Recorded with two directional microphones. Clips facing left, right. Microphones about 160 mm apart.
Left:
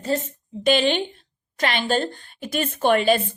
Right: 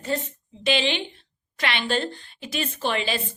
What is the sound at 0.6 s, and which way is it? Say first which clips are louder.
Speech: left 5 dB; 45° left (ahead or behind).